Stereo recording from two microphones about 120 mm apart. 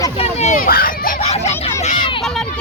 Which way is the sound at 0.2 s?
65° left (ahead or behind).